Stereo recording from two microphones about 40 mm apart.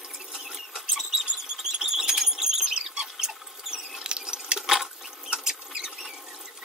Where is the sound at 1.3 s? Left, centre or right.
Centre.